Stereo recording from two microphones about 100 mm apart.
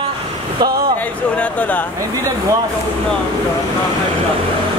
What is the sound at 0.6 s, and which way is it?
Speech, 40° right (ahead or behind).